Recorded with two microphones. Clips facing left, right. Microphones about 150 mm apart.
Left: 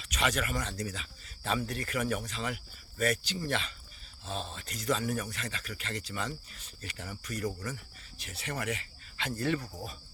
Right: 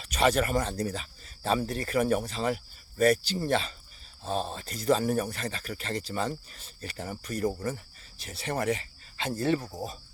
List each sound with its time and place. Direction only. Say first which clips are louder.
0.0 s speech: right 7 dB; 35° right (ahead or behind)